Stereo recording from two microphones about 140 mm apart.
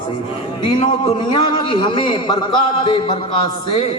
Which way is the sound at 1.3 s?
35° left (ahead or behind).